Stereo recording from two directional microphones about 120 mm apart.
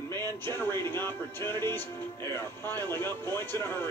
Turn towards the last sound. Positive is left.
turn(degrees=20)  # may be behind; listen again after turning